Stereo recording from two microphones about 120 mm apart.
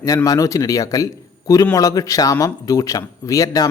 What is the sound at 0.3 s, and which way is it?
Speech, 30° left (ahead or behind).